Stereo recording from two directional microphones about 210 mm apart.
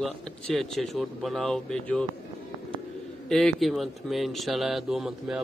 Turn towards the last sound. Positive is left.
turn(degrees=0)  # may be behind; listen again after turning